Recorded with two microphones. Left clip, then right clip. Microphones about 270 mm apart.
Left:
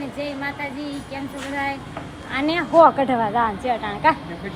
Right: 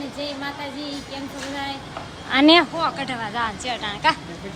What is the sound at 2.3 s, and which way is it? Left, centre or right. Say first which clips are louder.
Speech: right 9 dB; right.